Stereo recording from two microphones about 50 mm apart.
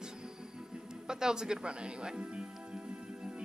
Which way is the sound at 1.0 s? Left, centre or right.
Centre.